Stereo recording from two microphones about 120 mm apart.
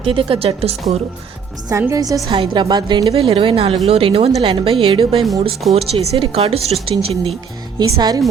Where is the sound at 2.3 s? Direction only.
45° right (ahead or behind).